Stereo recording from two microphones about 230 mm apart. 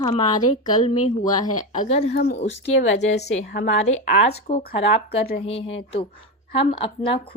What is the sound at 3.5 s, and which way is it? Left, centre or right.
A woman's voice, left.